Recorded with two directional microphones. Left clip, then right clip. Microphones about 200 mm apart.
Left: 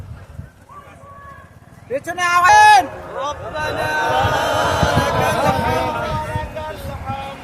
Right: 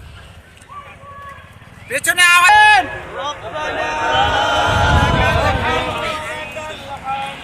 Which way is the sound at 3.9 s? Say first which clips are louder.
Right 2 dB; 55° left (ahead or behind).